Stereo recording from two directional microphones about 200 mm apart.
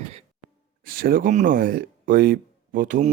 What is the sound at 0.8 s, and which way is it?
Speech, 45° right (ahead or behind).